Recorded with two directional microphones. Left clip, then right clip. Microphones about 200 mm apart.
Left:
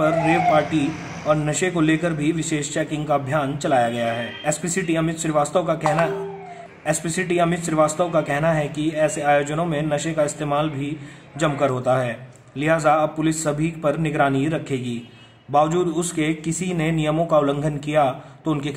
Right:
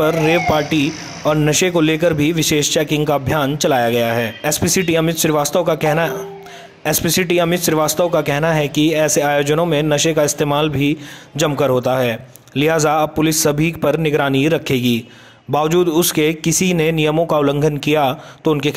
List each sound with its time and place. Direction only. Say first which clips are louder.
0.0 s speech: right 3 dB; 45° right (ahead or behind)